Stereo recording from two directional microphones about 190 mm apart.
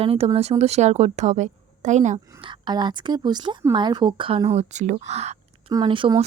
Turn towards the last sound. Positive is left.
turn(degrees=-25)  # may be behind; listen again after turning